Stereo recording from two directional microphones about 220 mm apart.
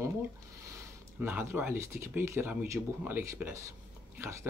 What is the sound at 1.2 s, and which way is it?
Speech, 10° right (ahead or behind).